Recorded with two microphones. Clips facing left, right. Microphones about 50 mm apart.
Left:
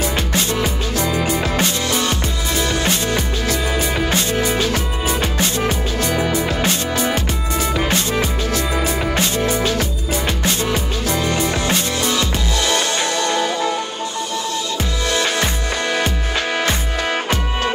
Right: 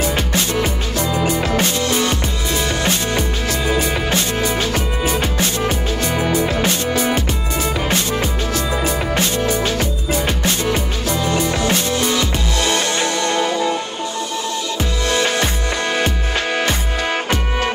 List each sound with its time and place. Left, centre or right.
0.1 s music: right
0.9 s music: left
2.7 s music: right
8.1 s music: left
9.6 s music: right
11.1 s music: left
11.7 s music: right
15.1 s music: right